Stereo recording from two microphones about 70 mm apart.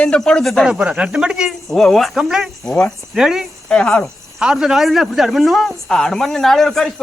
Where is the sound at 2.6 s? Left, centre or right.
Centre.